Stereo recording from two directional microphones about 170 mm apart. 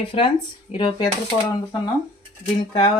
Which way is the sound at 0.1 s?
35° left (ahead or behind).